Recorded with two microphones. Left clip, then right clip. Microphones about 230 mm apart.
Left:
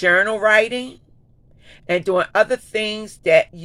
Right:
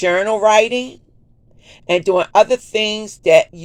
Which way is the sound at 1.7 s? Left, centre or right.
Centre.